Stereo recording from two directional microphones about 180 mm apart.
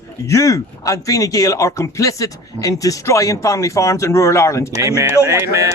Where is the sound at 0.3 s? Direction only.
15° left (ahead or behind).